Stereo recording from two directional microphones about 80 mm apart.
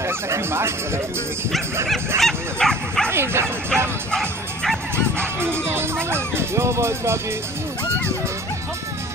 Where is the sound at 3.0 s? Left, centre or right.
Right.